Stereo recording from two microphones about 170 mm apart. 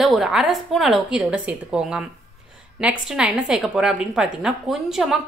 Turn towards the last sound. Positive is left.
turn(degrees=-5)  # may be behind; listen again after turning